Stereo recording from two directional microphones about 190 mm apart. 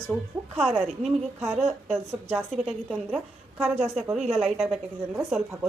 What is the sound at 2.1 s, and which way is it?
Speech, 15° right (ahead or behind).